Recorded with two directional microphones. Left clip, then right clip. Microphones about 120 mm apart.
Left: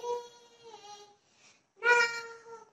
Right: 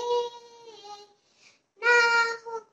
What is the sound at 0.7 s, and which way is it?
Music, 30° right (ahead or behind).